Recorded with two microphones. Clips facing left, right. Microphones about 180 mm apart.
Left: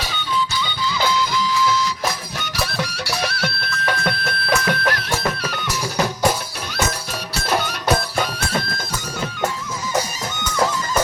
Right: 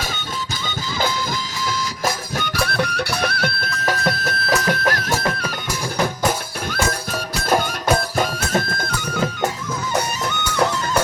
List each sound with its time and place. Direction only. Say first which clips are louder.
0.1 s music: left 5 dB; 45° right (ahead or behind)
8.2 s music: right 3 dB; 45° right (ahead or behind)
10.2 s music: right 1 dB; 65° right (ahead or behind)